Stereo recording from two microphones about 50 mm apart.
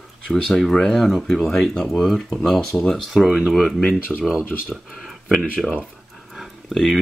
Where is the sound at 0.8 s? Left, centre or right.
Centre.